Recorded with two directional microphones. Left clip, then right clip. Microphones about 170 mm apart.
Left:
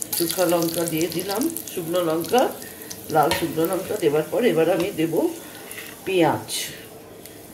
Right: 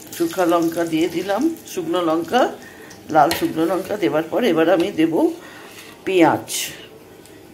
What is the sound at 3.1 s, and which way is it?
Stir, 20° right (ahead or behind).